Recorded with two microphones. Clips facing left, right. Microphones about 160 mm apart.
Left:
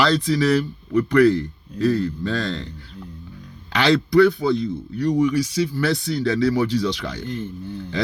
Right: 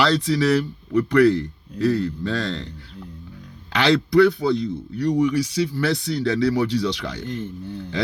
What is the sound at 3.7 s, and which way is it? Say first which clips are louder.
A man's voice: left 1 dB; 65° right (ahead or behind).